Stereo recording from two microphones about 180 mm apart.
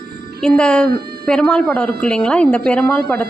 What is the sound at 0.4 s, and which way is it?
A woman's voice, 5° left (ahead or behind).